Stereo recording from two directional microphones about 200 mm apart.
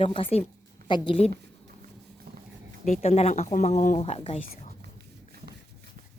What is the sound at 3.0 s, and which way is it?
Speech, 30° left (ahead or behind).